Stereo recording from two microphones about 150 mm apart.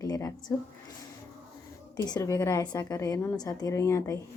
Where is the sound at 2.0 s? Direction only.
25° left (ahead or behind).